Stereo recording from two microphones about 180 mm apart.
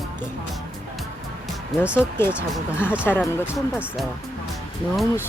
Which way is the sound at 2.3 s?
5° right (ahead or behind).